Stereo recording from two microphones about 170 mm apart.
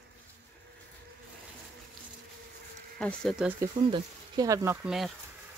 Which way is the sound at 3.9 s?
20° right (ahead or behind).